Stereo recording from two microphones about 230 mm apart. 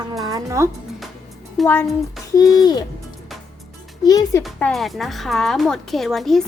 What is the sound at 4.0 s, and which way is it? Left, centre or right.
Speech, centre.